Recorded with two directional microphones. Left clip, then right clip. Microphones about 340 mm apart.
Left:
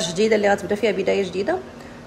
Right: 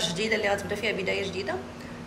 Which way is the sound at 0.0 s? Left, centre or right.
Left.